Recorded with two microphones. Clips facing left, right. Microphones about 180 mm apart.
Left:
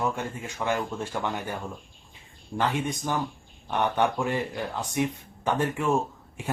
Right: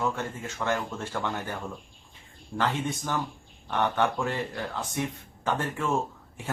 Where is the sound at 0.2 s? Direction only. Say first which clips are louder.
Left 1 dB; 15° left (ahead or behind).